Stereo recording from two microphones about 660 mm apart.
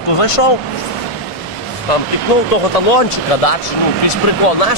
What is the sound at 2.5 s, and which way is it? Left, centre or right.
Speech, left.